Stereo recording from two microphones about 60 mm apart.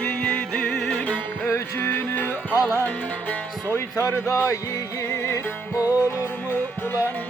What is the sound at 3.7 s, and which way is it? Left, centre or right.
Speech, left.